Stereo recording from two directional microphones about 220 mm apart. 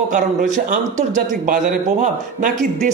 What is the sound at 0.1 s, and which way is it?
Speech, 35° right (ahead or behind).